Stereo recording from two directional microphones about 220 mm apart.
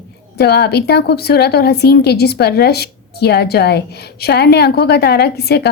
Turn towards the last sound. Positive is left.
turn(degrees=50)  # may be behind; listen again after turning